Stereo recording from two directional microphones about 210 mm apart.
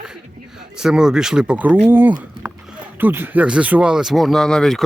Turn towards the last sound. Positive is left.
turn(degrees=0)  # may be behind; listen again after turning